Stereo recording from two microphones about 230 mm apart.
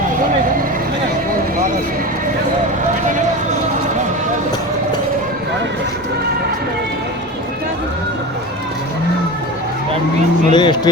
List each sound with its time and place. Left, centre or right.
10.5 s speech: centre